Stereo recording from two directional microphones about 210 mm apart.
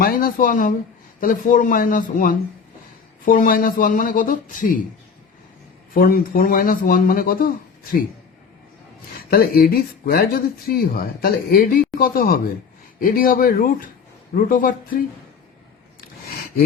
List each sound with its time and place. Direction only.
0.0 s speech: 45° left (ahead or behind)
5.9 s speech: 45° left (ahead or behind)
9.3 s speech: 45° left (ahead or behind)